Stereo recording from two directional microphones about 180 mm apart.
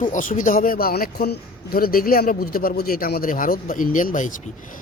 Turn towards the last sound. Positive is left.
turn(degrees=45)  # may be behind; listen again after turning